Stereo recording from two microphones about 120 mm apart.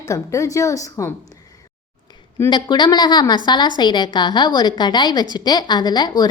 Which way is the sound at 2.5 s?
35° left (ahead or behind).